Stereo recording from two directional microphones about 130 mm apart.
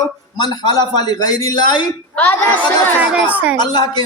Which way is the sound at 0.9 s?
30° left (ahead or behind).